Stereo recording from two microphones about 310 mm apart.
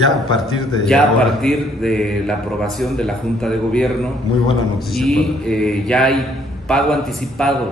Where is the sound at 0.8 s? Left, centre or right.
Centre.